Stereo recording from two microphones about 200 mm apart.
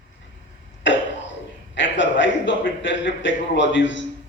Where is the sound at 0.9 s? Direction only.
65° left (ahead or behind).